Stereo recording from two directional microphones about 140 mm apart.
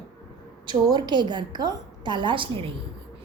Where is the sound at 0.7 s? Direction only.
30° right (ahead or behind).